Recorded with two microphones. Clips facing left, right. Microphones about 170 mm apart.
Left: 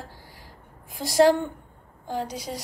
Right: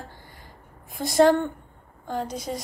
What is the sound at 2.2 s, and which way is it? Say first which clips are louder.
Speech: right 2 dB; 50° right (ahead or behind).